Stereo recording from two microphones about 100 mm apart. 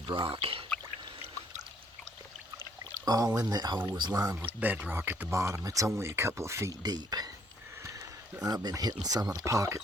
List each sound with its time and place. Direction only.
0.1 s speech: 55° right (ahead or behind)
3.0 s speech: 40° right (ahead or behind)
4.4 s speech: 15° right (ahead or behind)
6.8 s speech: 40° right (ahead or behind)
8.4 s speech: 40° right (ahead or behind)